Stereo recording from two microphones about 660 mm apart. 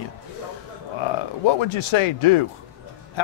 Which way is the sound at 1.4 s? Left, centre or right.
Left.